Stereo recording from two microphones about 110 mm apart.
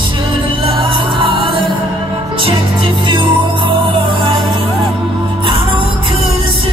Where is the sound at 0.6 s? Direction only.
50° right (ahead or behind).